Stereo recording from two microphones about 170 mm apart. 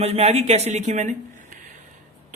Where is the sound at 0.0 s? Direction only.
40° right (ahead or behind).